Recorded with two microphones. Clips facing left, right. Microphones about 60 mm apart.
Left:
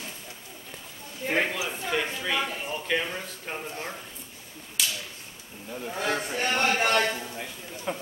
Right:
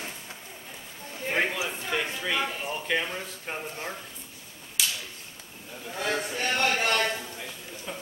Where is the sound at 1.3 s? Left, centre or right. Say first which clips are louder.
Even; centre.